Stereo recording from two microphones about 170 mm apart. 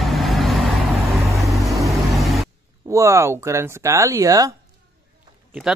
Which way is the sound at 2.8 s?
15° right (ahead or behind).